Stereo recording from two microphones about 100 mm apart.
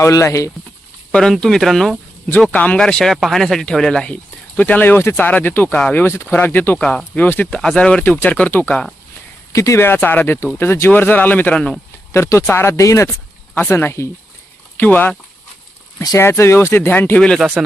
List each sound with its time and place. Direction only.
0.0 s speech: 30° left (ahead or behind)
1.1 s speech: 5° left (ahead or behind)
2.5 s speech: 15° left (ahead or behind)
5.7 s speech: 10° left (ahead or behind)
6.0 s speech: 25° left (ahead or behind)
9.5 s speech: 30° left (ahead or behind); by 11.7 s 15° left (ahead or behind)
12.1 s speech: 30° left (ahead or behind)
13.1 s a sound: 5° left (ahead or behind)
13.7 s speech: 25° left (ahead or behind)
16.1 s speech: 25° left (ahead or behind)
17.2 s speech: 5° left (ahead or behind)